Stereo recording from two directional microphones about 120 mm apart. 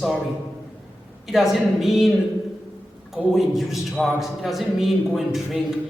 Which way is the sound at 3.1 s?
Centre (ahead or behind).